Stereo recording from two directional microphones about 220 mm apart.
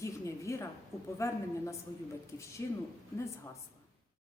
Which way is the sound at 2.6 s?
15° left (ahead or behind).